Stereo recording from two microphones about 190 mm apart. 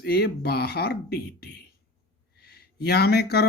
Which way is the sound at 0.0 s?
55° left (ahead or behind).